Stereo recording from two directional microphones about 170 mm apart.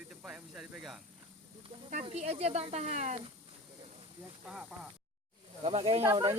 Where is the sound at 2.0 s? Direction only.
40° right (ahead or behind).